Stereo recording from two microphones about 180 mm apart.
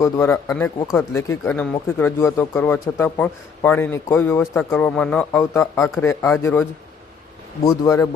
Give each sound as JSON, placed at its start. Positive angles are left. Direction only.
{"t": 0.0, "sound": "a man's voice", "side_deg": 15}
{"t": 1.5, "sound": "a man's voice", "side_deg": 5}
{"t": 5.4, "sound": "a man's voice", "side_deg": 15}
{"t": 7.9, "sound": "a man's voice", "side_deg": 15}